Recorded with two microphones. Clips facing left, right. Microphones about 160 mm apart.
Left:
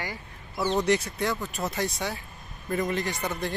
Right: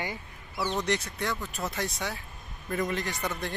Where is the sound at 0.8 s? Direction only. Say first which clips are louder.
Left 5 dB; 5° left (ahead or behind).